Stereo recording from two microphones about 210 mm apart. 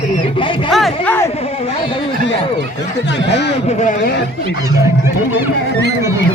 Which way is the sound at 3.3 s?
55° left (ahead or behind).